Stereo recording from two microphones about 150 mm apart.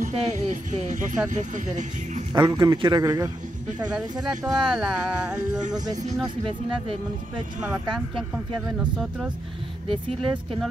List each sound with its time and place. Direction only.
0.0 s speech: 55° right (ahead or behind)
2.3 s a man's voice: 25° right (ahead or behind)
4.3 s speech: 5° right (ahead or behind)
9.8 s speech: 35° right (ahead or behind)